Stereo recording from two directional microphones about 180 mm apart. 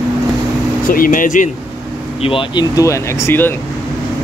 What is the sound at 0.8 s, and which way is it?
Speech, 50° left (ahead or behind).